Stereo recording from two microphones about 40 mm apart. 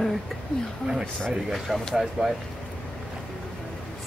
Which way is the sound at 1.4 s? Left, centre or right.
Centre.